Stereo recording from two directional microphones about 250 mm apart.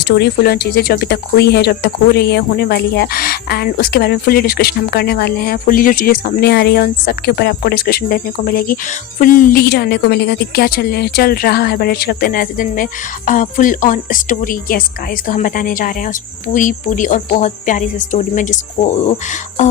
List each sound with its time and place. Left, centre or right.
0.0 s speech: left